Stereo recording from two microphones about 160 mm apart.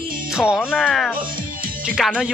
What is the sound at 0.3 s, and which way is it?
Speech, 5° right (ahead or behind).